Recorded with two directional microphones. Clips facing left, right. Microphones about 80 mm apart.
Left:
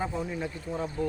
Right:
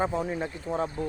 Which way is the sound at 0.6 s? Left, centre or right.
Right.